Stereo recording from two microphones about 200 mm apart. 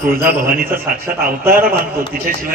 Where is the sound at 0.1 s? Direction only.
45° right (ahead or behind).